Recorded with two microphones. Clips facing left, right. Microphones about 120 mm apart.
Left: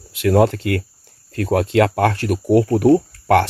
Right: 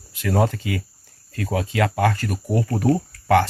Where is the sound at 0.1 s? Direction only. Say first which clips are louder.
Left 6 dB; 70° left (ahead or behind).